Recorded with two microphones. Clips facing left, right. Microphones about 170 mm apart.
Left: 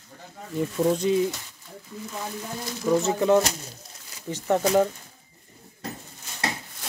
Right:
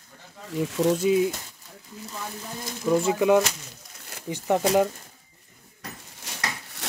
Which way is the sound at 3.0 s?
10° right (ahead or behind).